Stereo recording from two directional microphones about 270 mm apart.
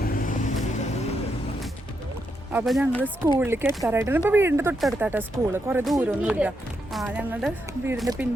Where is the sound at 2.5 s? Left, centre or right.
Centre.